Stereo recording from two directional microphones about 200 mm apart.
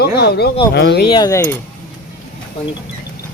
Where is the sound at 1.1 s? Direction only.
20° left (ahead or behind).